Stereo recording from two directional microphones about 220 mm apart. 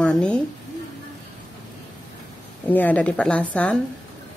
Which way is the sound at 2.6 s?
5° left (ahead or behind).